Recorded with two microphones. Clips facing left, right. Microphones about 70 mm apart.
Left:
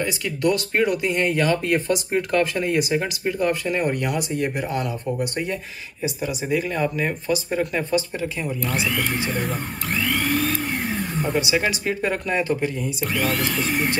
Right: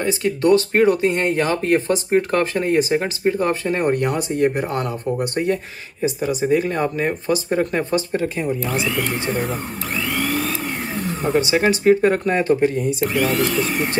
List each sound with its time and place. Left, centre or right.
0.0 s speech: right
6.0 s speech: right
8.6 s speech: centre
10.0 s vacuum cleaner: centre
11.3 s speech: right
13.0 s speech: centre